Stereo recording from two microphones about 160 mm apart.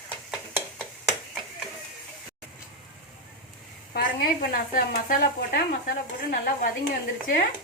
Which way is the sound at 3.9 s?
65° left (ahead or behind).